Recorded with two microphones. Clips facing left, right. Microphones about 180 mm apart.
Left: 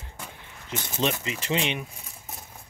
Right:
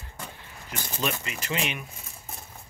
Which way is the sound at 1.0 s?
25° left (ahead or behind).